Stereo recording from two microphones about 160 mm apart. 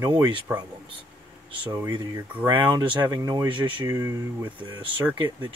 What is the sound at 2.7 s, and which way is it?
Speech, 30° right (ahead or behind).